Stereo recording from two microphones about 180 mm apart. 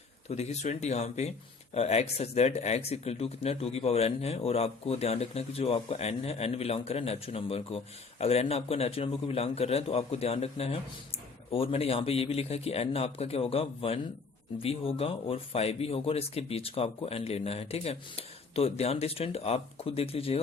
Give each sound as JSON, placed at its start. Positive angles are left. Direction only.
{"t": 0.3, "sound": "speech", "side_deg": 35}